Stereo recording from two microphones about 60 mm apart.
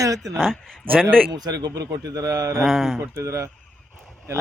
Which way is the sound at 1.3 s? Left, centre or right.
Right.